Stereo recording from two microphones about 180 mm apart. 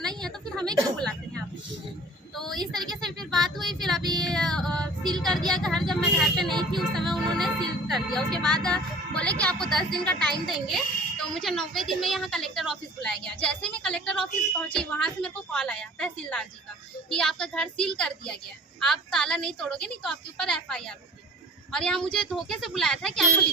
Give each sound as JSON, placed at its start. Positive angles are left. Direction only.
{"t": 0.2, "sound": "a sound", "side_deg": 5}
{"t": 0.9, "sound": "speech", "side_deg": 5}
{"t": 2.3, "sound": "a sound", "side_deg": 0}
{"t": 2.6, "sound": "speech", "side_deg": -25}
{"t": 3.2, "sound": "a child's voice", "side_deg": 0}
{"t": 4.1, "sound": "female singing", "side_deg": 5}
{"t": 5.5, "sound": "a child's voice", "side_deg": 5}
{"t": 6.5, "sound": "speech", "side_deg": -25}
{"t": 6.7, "sound": "music", "side_deg": 0}
{"t": 9.4, "sound": "a child's voice", "side_deg": 5}